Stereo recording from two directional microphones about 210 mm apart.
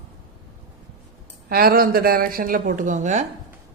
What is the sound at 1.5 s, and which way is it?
A woman's voice, 45° right (ahead or behind).